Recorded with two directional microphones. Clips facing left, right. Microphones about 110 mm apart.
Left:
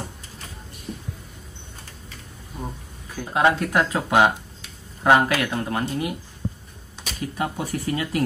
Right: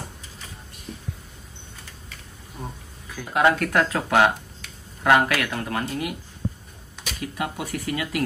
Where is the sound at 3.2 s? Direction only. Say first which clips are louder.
Even; 25° left (ahead or behind).